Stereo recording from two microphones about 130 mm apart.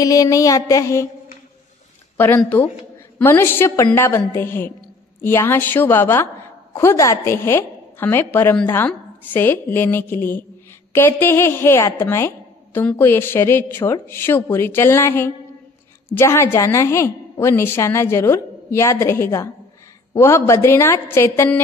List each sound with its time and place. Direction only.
0.0 s a woman's voice: 25° left (ahead or behind)
2.1 s a woman's voice: 15° left (ahead or behind)